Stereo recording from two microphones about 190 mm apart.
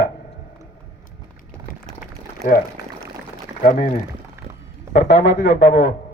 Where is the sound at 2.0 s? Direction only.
45° left (ahead or behind).